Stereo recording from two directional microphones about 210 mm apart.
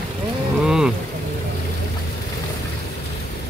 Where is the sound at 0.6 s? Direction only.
5° right (ahead or behind).